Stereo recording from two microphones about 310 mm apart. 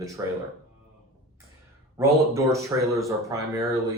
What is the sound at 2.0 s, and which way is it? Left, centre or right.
Speech, centre.